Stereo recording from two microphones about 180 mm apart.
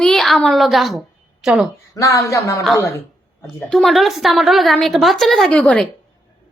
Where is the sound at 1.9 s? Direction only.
15° left (ahead or behind).